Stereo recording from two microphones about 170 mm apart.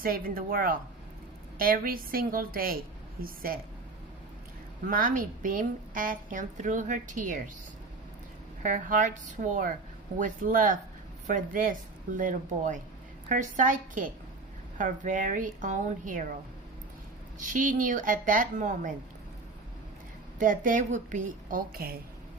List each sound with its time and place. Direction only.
0.0 s a woman's voice: 60° right (ahead or behind)
4.9 s a woman's voice: 55° right (ahead or behind)
8.6 s a woman's voice: 50° right (ahead or behind)
17.4 s a woman's voice: 50° right (ahead or behind)
20.4 s a woman's voice: 50° right (ahead or behind)